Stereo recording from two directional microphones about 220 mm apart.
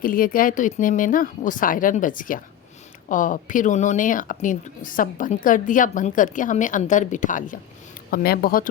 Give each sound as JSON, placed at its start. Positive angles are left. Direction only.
{"t": 0.0, "sound": "speech", "side_deg": 40}